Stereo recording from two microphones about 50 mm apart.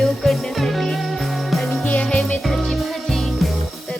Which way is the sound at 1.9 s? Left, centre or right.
Left.